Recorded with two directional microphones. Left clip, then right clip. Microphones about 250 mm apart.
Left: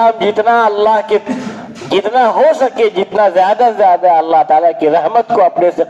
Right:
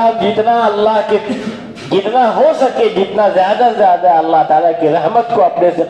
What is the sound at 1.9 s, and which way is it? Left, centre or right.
Speech, left.